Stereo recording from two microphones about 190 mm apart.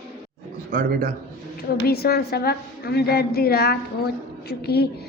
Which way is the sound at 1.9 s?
55° left (ahead or behind).